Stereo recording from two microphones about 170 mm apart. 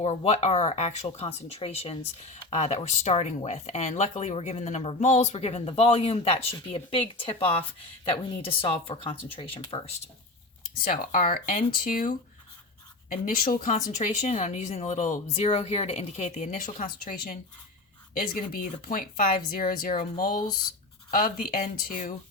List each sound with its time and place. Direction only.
0.0 s speech: 35° left (ahead or behind)
10.8 s speech: 55° left (ahead or behind)